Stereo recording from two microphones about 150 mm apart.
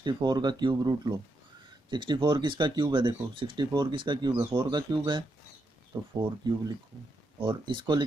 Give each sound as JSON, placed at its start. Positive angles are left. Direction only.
{"t": 0.0, "sound": "speech", "side_deg": -30}